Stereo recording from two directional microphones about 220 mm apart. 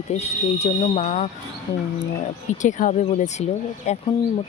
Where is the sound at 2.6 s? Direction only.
35° left (ahead or behind).